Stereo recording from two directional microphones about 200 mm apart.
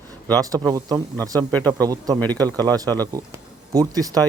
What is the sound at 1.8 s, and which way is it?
A man's voice, 20° right (ahead or behind).